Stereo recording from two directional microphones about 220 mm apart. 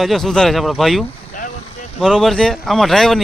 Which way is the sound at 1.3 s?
35° left (ahead or behind).